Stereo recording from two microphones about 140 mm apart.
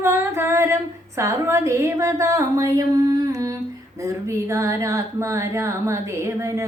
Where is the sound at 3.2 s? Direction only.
25° right (ahead or behind).